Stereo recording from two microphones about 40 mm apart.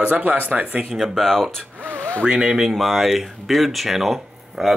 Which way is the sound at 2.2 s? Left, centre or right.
Right.